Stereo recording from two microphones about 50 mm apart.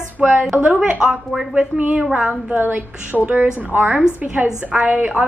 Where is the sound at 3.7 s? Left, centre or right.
Right.